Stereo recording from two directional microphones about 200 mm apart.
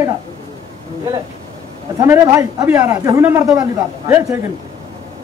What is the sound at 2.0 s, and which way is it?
A man's voice, 15° right (ahead or behind).